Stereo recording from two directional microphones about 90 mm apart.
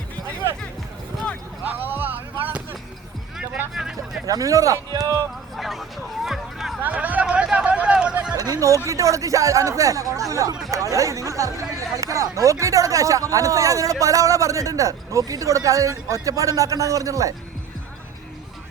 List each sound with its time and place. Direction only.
1.6 s music: 20° right (ahead or behind)
3.8 s hubbub: 5° right (ahead or behind)
4.3 s a man's voice: 40° right (ahead or behind)
5.5 s speech: centre (ahead or behind)
6.8 s a sound: 20° right (ahead or behind)
8.4 s a man's voice: 40° right (ahead or behind)